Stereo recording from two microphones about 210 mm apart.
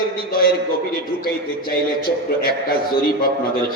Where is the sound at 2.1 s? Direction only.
45° left (ahead or behind).